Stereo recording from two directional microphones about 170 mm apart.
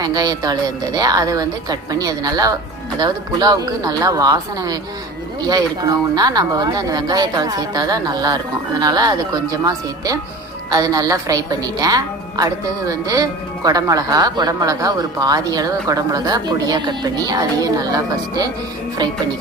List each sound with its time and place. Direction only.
0.0 s speech: 25° right (ahead or behind)